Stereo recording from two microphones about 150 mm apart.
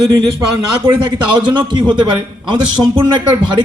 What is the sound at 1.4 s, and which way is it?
Speech, 30° right (ahead or behind).